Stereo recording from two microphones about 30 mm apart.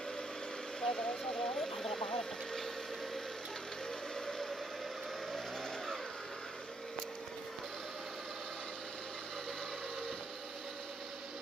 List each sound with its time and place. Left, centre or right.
0.7 s speech: centre